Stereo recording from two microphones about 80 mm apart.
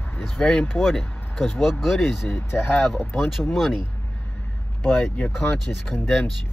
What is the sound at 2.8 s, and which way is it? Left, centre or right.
Speech, centre.